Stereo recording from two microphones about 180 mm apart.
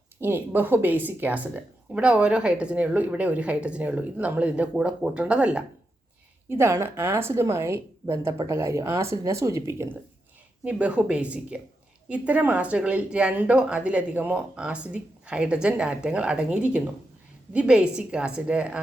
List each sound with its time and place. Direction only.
0.2 s speech: 10° right (ahead or behind)